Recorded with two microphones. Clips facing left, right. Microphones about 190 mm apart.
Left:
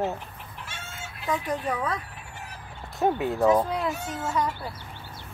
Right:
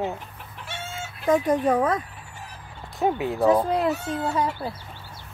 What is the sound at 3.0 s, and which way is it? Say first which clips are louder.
Speech: right 1 dB; centre (ahead or behind).